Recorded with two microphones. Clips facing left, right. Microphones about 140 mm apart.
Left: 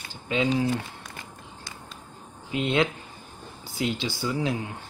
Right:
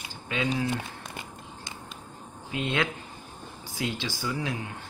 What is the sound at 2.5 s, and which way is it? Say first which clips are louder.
Speech: left 4 dB; 20° left (ahead or behind).